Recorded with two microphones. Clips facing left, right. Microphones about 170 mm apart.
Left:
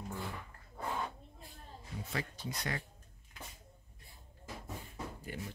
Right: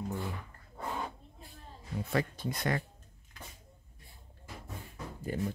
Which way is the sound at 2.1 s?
55° right (ahead or behind).